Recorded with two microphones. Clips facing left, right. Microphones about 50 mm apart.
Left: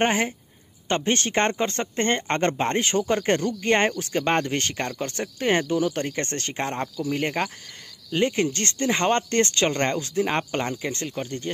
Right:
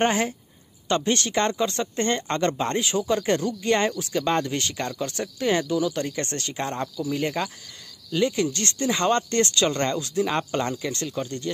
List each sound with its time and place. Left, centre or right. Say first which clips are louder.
0.0 s speech: even; left